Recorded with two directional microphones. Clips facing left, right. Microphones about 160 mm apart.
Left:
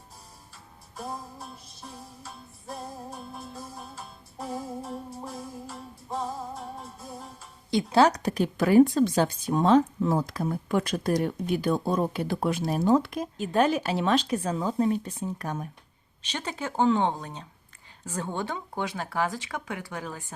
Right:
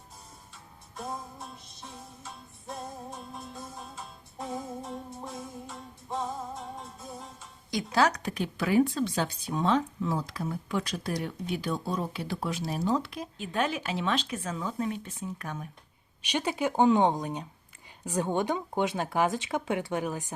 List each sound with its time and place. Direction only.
0.5 s music: centre (ahead or behind)
7.7 s speech: 25° left (ahead or behind)
16.2 s speech: 15° right (ahead or behind)